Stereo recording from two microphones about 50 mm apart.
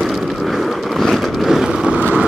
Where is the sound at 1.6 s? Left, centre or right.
Centre.